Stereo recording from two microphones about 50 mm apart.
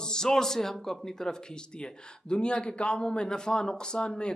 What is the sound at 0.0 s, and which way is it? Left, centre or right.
A man's voice, centre.